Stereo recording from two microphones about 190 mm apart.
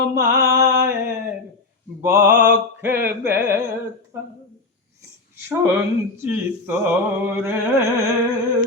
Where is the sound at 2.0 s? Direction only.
15° right (ahead or behind).